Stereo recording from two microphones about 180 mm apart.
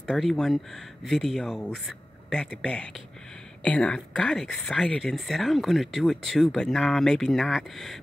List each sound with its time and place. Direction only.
0.0 s speech: 5° left (ahead or behind)